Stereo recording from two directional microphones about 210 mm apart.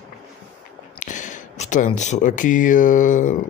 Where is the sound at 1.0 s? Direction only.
35° left (ahead or behind).